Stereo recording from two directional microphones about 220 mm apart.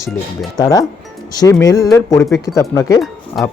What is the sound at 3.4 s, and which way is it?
Speech, centre (ahead or behind).